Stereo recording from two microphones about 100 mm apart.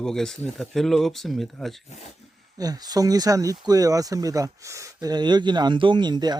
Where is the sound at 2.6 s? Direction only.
40° right (ahead or behind).